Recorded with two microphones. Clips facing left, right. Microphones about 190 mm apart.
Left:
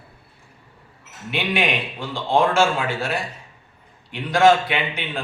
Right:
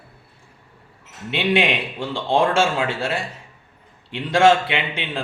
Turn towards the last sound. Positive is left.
turn(degrees=-25)  # may be behind; listen again after turning